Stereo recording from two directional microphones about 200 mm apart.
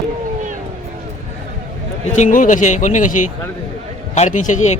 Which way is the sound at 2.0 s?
35° left (ahead or behind).